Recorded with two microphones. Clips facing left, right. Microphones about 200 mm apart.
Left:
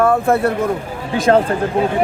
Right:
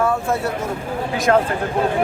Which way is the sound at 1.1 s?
30° left (ahead or behind).